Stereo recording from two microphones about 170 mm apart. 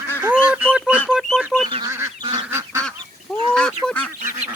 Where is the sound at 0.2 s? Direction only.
10° right (ahead or behind).